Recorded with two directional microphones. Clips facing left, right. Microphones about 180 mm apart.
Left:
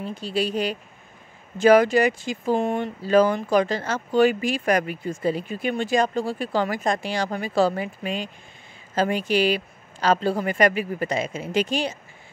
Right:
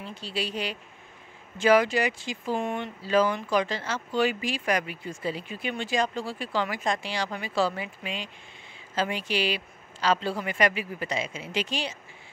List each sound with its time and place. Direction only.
0.0 s speech: 45° left (ahead or behind)